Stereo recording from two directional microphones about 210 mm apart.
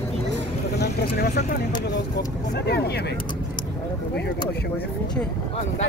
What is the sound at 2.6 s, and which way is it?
Speech, 50° left (ahead or behind).